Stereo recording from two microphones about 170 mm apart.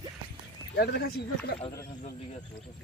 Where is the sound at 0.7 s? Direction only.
75° left (ahead or behind).